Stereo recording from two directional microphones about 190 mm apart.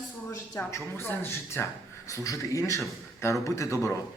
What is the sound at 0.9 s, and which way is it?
Speech, 15° left (ahead or behind).